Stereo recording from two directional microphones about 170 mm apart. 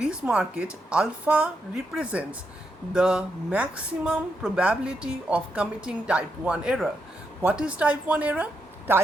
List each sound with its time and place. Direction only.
0.0 s a woman's voice: 5° right (ahead or behind)